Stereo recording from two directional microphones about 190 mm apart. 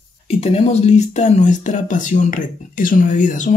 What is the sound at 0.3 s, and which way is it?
Speech, 30° left (ahead or behind).